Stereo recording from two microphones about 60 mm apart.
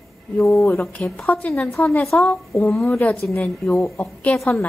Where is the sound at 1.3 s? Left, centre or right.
Left.